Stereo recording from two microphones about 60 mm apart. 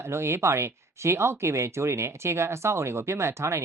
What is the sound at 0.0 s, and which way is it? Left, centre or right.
Speech, right.